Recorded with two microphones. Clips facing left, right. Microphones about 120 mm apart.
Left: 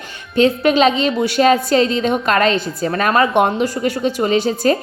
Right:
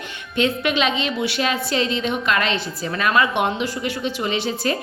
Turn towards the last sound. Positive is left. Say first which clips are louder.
# left 7 dB
turn(degrees=40)  # may be behind; listen again after turning